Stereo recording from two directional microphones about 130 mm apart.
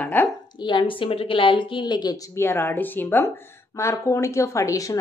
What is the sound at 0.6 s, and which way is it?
Speech, 35° left (ahead or behind).